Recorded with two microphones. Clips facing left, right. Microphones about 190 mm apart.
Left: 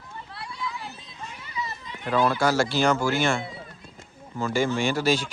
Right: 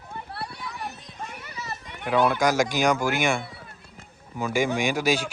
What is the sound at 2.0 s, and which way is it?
Speech, 15° right (ahead or behind).